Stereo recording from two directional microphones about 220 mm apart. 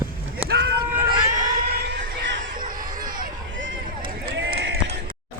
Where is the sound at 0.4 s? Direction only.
50° right (ahead or behind).